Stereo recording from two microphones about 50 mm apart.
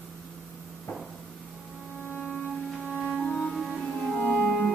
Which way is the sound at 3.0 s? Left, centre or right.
Left.